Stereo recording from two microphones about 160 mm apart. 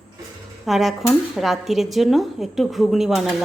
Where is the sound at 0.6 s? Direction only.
Centre (ahead or behind).